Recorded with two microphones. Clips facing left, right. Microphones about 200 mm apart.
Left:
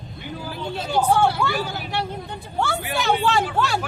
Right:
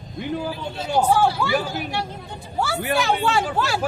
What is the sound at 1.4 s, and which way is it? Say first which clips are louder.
Speech: right 3 dB; centre (ahead or behind).